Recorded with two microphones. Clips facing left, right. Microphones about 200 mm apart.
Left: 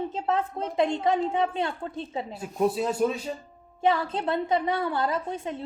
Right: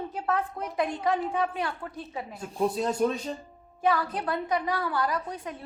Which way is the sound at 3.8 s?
25° left (ahead or behind).